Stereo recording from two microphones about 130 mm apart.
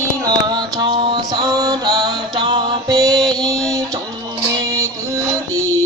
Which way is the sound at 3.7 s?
25° right (ahead or behind).